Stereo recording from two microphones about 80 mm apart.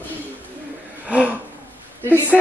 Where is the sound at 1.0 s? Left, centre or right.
Centre.